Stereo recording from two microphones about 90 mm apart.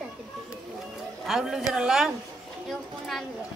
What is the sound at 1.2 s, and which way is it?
Speech, 5° right (ahead or behind).